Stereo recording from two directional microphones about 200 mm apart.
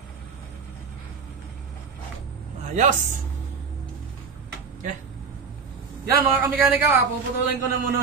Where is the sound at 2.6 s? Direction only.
35° right (ahead or behind).